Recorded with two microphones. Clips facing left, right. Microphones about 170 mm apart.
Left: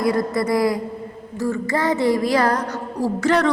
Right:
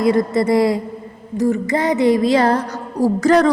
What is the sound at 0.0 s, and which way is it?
Speech, 25° right (ahead or behind).